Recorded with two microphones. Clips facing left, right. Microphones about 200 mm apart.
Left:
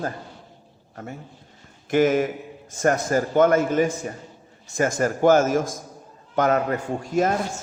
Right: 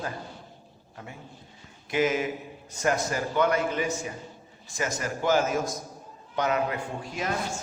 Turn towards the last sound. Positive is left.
turn(degrees=45)  # may be behind; listen again after turning